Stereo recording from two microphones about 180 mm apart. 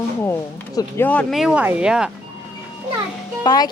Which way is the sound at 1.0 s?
5° left (ahead or behind).